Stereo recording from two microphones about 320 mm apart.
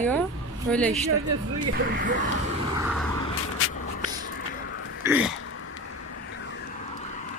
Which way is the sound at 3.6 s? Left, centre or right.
Left.